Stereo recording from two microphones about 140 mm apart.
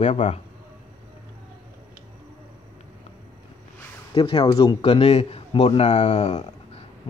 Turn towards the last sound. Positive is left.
turn(degrees=55)  # may be behind; listen again after turning